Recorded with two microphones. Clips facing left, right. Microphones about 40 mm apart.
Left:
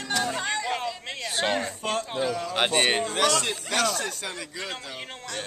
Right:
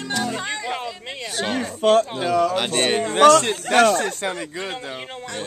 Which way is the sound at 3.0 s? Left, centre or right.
Right.